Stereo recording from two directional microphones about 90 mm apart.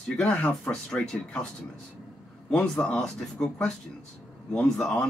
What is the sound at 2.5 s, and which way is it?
A man's voice, 15° left (ahead or behind).